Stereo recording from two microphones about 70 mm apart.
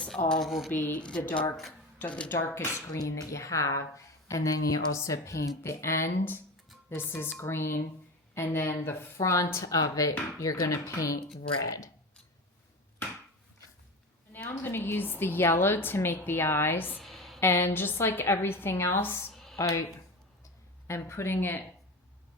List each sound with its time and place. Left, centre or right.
0.1 s speech: centre
0.8 s speech: left
1.0 s speech: centre
3.0 s a woman's voice: left
14.3 s a woman's voice: left
17.0 s a sound: centre
17.4 s a woman's voice: left
19.3 s a sound: centre
19.5 s speech: left
20.8 s a woman's voice: left